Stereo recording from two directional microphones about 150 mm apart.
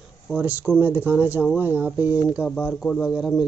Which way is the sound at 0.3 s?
10° right (ahead or behind).